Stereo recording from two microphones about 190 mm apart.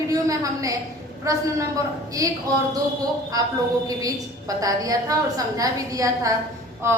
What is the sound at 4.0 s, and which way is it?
A woman's voice, 20° right (ahead or behind).